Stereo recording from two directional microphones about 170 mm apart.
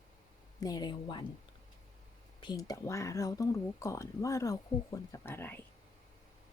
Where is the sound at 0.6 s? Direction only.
20° left (ahead or behind).